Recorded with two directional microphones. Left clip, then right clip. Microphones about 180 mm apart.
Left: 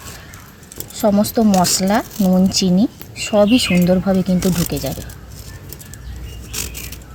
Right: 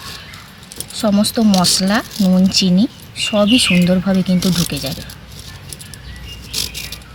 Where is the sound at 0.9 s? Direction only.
20° left (ahead or behind).